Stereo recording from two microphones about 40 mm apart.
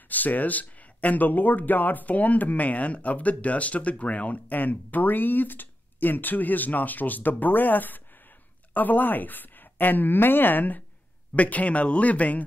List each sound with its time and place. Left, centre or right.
0.1 s speech: left
11.3 s speech: left